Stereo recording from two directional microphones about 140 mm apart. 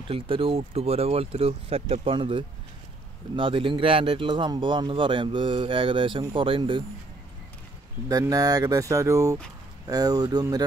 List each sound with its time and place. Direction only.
0.1 s speech: 40° right (ahead or behind)
8.1 s speech: 25° right (ahead or behind)